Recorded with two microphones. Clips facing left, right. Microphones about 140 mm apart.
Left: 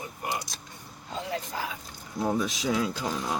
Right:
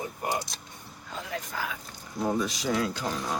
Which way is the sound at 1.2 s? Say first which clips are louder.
Left 2 dB; 30° left (ahead or behind).